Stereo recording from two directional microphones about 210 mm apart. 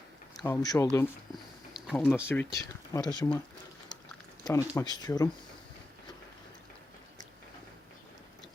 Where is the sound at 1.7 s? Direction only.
Centre (ahead or behind).